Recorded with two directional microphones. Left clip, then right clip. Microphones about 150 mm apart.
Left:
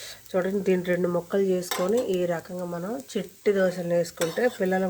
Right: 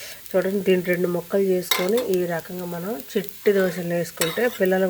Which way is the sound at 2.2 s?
20° right (ahead or behind).